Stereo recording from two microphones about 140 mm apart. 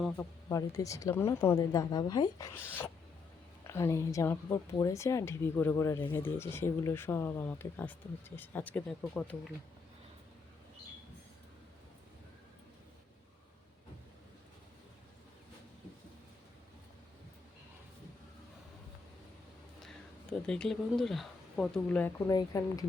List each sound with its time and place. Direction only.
0.2 s a woman's voice: 25° left (ahead or behind)
2.6 s a woman's voice: 15° left (ahead or behind)
20.5 s speech: 5° left (ahead or behind)
22.3 s a woman's voice: 25° left (ahead or behind)